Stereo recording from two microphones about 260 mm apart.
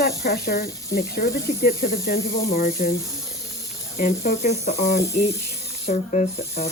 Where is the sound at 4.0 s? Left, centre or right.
Left.